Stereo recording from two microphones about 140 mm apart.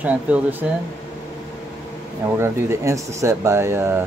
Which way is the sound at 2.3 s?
15° right (ahead or behind).